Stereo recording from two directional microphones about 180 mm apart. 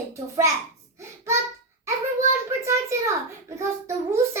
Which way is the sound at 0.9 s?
15° right (ahead or behind).